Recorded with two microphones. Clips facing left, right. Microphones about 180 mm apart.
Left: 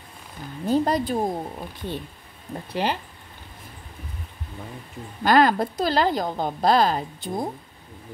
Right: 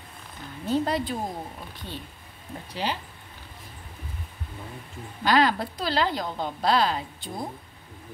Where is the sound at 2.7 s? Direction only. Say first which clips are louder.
Left 5 dB; 60° left (ahead or behind).